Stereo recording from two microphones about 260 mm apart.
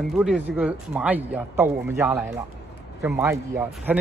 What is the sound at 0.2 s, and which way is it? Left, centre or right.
Speech, centre.